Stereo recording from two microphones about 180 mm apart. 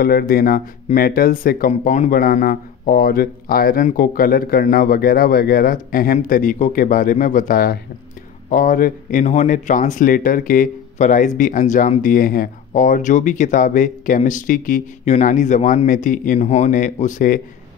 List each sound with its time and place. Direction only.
0.0 s speech: 55° left (ahead or behind)
1.7 s speech: 40° left (ahead or behind)